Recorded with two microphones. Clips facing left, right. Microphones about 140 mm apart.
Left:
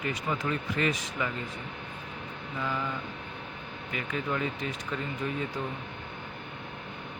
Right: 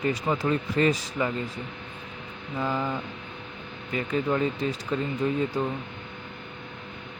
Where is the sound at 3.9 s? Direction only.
35° right (ahead or behind).